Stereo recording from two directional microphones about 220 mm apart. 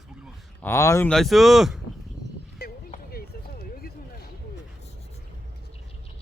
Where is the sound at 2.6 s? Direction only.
45° left (ahead or behind).